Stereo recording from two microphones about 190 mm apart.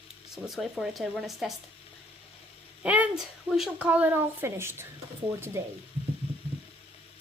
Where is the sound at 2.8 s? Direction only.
5° right (ahead or behind).